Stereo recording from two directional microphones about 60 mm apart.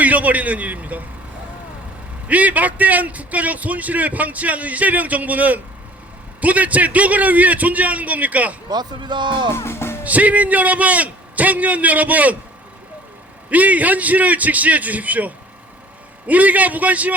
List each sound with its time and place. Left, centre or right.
0.0 s a man's voice: right
2.2 s a man's voice: right
9.5 s music: left
10.0 s a man's voice: right
13.5 s a man's voice: right